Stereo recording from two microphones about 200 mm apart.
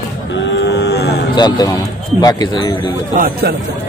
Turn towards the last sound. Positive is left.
turn(degrees=-45)  # may be behind; listen again after turning